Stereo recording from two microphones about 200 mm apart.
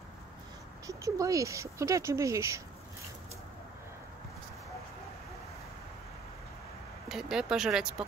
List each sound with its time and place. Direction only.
0.8 s speech: 15° right (ahead or behind)
7.1 s speech: centre (ahead or behind)